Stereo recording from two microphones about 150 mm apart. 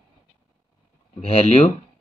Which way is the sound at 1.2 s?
40° left (ahead or behind).